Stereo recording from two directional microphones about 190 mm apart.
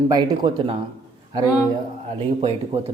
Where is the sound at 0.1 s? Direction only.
20° right (ahead or behind).